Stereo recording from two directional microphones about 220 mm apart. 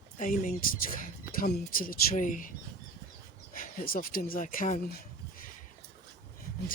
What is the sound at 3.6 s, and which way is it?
Speech, 40° left (ahead or behind).